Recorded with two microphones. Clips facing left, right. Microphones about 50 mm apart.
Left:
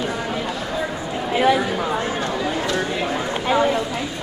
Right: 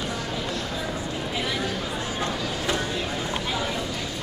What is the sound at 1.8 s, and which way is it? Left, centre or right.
Chatter, left.